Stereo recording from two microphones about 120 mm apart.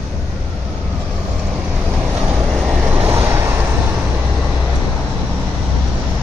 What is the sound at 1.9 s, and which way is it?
Vehicle, 10° right (ahead or behind).